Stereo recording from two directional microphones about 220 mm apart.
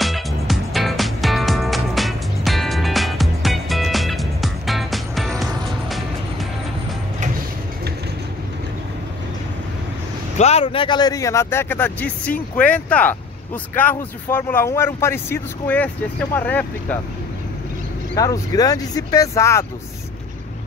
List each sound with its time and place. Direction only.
0.0 s music: centre (ahead or behind)
10.3 s speech: 30° left (ahead or behind); by 16.6 s 5° left (ahead or behind)
18.1 s speech: 15° left (ahead or behind)